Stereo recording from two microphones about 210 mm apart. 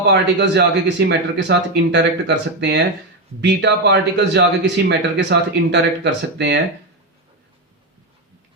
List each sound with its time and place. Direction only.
0.0 s speech: 55° right (ahead or behind)